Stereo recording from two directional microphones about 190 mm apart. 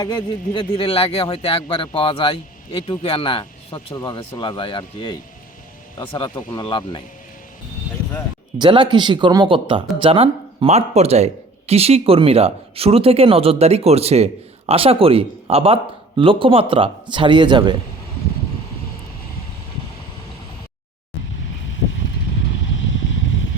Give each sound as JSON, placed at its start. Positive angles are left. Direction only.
{"t": 0.0, "sound": "speech", "side_deg": 25}
{"t": 8.5, "sound": "speech", "side_deg": -25}